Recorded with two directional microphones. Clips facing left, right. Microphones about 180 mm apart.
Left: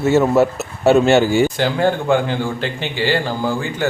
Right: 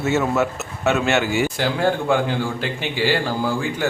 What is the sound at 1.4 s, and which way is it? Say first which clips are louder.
A man's voice: left 3 dB; centre (ahead or behind).